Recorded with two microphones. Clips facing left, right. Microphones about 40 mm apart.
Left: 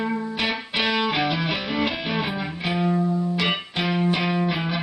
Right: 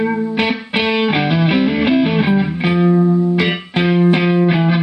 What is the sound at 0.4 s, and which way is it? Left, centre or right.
Music, right.